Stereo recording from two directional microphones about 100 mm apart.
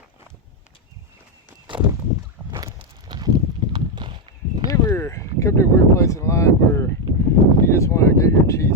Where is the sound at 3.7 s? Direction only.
50° right (ahead or behind).